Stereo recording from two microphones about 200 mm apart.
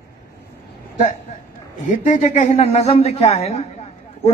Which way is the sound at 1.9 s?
40° left (ahead or behind).